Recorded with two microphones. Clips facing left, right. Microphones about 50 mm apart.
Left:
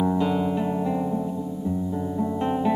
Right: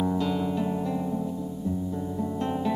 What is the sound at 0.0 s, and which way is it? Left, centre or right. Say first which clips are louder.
Music: left 4 dB; centre.